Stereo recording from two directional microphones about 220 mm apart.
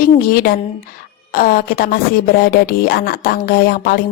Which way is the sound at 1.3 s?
40° left (ahead or behind).